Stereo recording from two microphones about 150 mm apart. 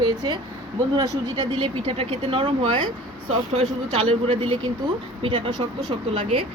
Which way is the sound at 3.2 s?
45° right (ahead or behind).